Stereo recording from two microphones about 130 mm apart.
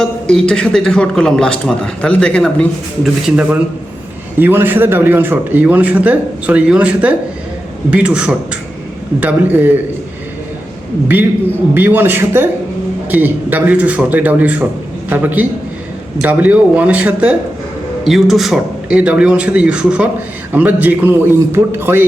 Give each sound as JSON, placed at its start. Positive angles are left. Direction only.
{"t": 0.0, "sound": "a man's voice", "side_deg": 5}
{"t": 3.0, "sound": "a man's voice", "side_deg": -5}
{"t": 11.7, "sound": "a man's voice", "side_deg": -15}